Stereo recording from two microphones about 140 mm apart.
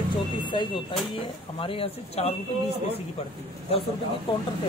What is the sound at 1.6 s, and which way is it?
Speech, 40° left (ahead or behind).